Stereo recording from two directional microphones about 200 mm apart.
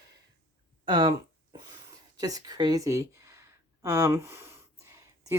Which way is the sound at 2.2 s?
20° right (ahead or behind).